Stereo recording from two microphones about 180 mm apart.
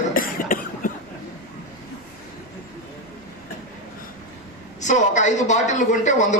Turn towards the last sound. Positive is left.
turn(degrees=40)  # may be behind; listen again after turning